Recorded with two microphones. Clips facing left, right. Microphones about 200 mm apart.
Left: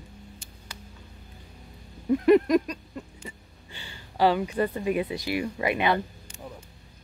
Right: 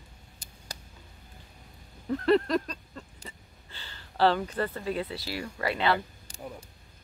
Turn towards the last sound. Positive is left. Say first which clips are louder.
# even
turn(degrees=-35)  # may be behind; listen again after turning